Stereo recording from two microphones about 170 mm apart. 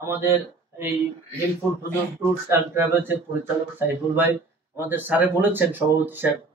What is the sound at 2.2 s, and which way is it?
A man's voice, 15° right (ahead or behind).